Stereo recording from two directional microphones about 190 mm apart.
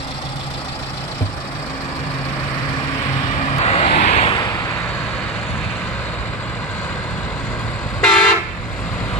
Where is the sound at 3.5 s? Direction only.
35° left (ahead or behind).